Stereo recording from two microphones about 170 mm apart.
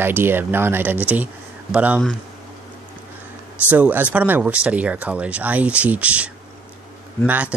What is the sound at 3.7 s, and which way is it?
Speech, 10° right (ahead or behind).